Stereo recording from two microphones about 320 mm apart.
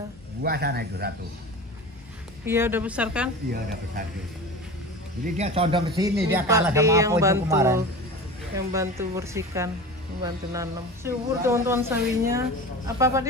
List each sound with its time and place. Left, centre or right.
0.4 s speech: right
2.4 s a woman's voice: centre
5.2 s speech: centre